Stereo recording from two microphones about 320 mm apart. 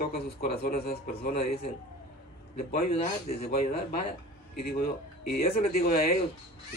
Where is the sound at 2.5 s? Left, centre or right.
Left.